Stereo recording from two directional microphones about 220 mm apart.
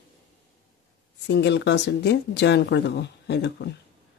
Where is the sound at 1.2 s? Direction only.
50° left (ahead or behind).